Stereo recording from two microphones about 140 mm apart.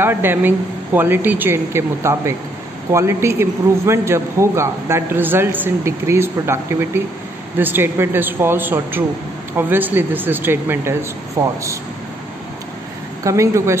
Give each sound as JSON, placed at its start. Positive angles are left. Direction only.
{"t": 0.0, "sound": "a man's voice", "side_deg": -15}
{"t": 13.2, "sound": "a man's voice", "side_deg": -20}